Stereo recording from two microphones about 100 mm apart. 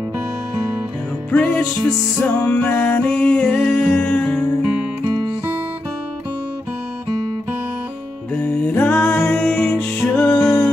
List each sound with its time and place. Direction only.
1.3 s music: 15° left (ahead or behind)
5.0 s music: 45° right (ahead or behind)
8.4 s music: 15° left (ahead or behind)